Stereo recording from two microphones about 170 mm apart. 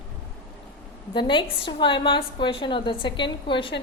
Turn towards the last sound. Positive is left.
turn(degrees=30)  # may be behind; listen again after turning